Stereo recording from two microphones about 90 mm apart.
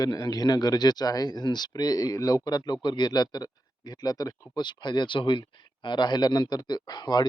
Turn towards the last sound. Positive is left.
turn(degrees=50)  # may be behind; listen again after turning